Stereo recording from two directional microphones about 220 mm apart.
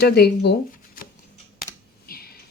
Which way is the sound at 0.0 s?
45° left (ahead or behind).